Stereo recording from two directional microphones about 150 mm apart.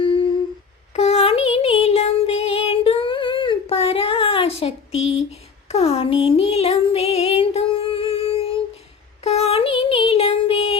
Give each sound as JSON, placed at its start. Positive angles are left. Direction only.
{"t": 0.0, "sound": "humming", "side_deg": 35}
{"t": 0.9, "sound": "child singing", "side_deg": 45}
{"t": 5.6, "sound": "music", "side_deg": 45}
{"t": 9.2, "sound": "child singing", "side_deg": 45}